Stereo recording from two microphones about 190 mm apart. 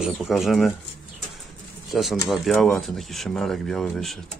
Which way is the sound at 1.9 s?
Centre (ahead or behind).